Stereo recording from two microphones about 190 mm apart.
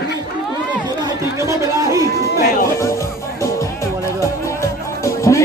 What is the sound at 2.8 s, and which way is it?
Music, 15° left (ahead or behind).